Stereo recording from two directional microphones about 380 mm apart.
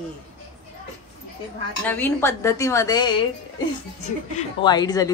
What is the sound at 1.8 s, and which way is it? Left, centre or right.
A woman's voice, centre.